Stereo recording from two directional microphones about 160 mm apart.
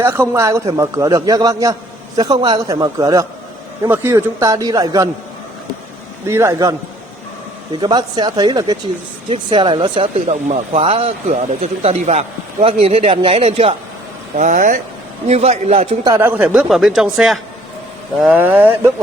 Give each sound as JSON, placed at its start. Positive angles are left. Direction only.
{"t": 0.0, "sound": "a man's voice", "side_deg": -15}
{"t": 6.2, "sound": "a man's voice", "side_deg": -15}
{"t": 10.2, "sound": "speech", "side_deg": -45}
{"t": 14.3, "sound": "speech", "side_deg": -55}
{"t": 15.3, "sound": "speech", "side_deg": -40}
{"t": 16.0, "sound": "a man's voice", "side_deg": -15}